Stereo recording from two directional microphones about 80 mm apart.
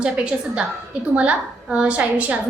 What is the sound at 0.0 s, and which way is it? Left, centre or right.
A woman's voice, centre.